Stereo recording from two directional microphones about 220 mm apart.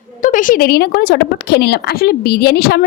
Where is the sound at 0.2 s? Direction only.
35° left (ahead or behind).